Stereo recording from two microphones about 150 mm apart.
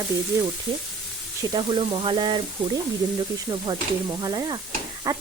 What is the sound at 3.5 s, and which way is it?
Speech, 30° right (ahead or behind).